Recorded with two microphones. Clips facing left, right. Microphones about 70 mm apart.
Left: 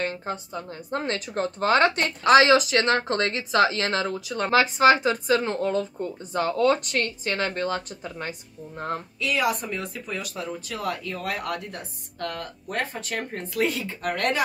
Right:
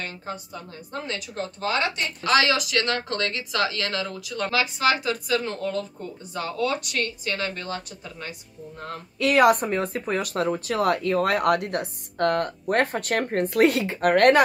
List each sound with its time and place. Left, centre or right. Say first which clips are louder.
0.0 s speech: left 5 dB; left
2.2 s speech: left 5 dB; left
9.2 s speech: right 8 dB; right